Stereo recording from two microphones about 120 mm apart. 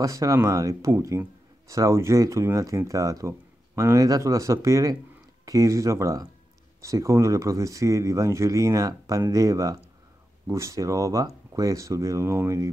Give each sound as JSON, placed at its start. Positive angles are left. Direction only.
{"t": 0.0, "sound": "speech", "side_deg": -25}